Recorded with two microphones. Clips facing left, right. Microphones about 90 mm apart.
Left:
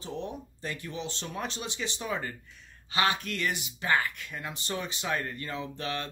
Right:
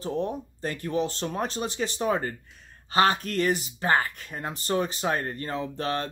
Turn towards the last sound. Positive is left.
turn(degrees=-40)  # may be behind; listen again after turning